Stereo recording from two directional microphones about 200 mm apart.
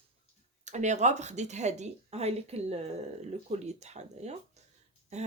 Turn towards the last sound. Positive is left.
turn(degrees=-35)  # may be behind; listen again after turning